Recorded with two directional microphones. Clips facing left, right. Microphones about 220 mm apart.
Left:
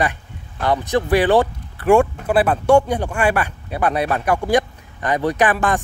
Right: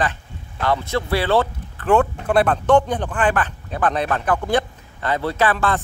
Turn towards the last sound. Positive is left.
turn(degrees=15)  # may be behind; listen again after turning